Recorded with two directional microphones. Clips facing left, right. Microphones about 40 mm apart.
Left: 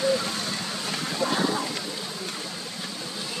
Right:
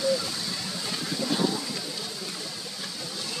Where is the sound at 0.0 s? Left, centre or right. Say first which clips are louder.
Left 2 dB; left.